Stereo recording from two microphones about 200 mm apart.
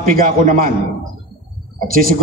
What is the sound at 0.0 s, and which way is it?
Speech, 45° right (ahead or behind).